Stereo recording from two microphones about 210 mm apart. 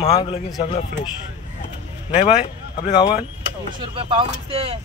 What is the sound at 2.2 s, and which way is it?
Speech, 30° left (ahead or behind).